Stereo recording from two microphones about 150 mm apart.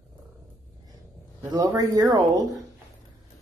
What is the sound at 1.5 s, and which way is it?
Speech, 25° right (ahead or behind).